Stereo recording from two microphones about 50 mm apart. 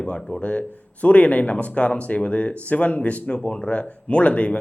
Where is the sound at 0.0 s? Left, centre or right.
Centre.